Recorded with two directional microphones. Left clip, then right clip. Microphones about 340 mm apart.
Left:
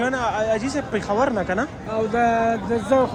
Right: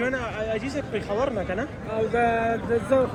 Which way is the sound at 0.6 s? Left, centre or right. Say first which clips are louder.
Left 5 dB; left.